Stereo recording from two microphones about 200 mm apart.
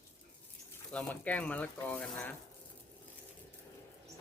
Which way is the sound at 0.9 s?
5° left (ahead or behind).